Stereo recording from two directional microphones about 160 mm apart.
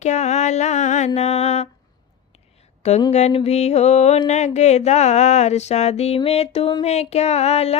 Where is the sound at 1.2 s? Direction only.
40° left (ahead or behind).